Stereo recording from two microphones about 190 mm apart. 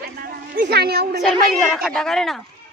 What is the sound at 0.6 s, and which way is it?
Speech, 55° right (ahead or behind).